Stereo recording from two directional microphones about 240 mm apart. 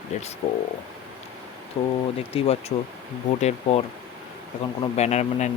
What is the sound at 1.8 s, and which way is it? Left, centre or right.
Speech, left.